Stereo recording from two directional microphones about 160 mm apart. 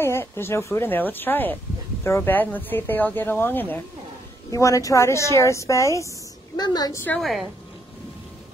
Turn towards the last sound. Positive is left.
turn(degrees=0)  # may be behind; listen again after turning